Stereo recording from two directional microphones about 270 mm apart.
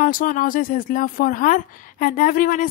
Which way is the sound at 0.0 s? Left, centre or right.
Left.